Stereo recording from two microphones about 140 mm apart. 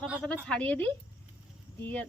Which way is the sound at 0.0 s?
5° right (ahead or behind).